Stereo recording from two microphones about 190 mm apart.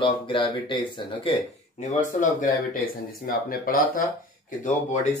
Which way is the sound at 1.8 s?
40° left (ahead or behind).